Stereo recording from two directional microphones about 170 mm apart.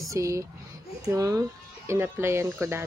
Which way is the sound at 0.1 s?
20° right (ahead or behind).